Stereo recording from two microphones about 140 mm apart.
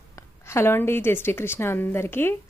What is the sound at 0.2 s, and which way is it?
A woman's voice, 20° left (ahead or behind).